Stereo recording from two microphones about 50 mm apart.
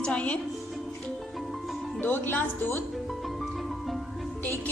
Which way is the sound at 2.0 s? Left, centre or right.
Left.